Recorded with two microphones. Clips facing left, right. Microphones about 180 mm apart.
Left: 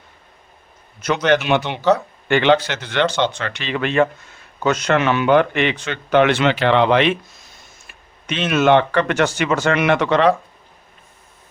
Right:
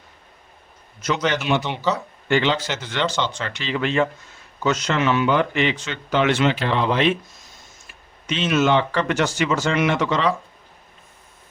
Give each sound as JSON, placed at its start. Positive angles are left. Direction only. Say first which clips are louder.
{"t": 1.0, "sound": "speech", "louder": "left 5 dB", "side_deg": 60}